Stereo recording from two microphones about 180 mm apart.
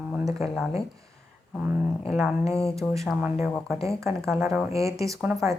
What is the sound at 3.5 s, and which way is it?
Speech, centre (ahead or behind).